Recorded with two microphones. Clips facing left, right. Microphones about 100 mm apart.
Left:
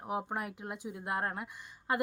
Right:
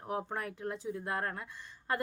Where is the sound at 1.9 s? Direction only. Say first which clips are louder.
Left 3 dB; 15° left (ahead or behind).